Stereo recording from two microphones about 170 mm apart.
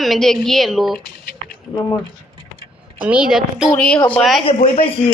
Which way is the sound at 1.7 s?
20° left (ahead or behind).